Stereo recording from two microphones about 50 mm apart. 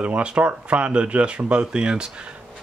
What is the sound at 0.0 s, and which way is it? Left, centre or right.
Speech, right.